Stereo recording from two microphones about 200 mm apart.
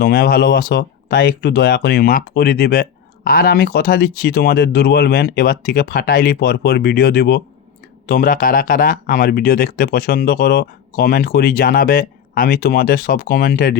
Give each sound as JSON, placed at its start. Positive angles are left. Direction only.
{"t": 0.0, "sound": "speech", "side_deg": 50}